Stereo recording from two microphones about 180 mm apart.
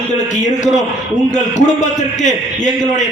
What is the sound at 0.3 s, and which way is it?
A man's voice, 40° left (ahead or behind).